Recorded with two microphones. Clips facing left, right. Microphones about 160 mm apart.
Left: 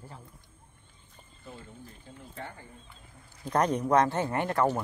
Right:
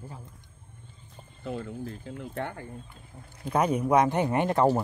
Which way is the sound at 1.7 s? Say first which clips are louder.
Right 11 dB; 90° right.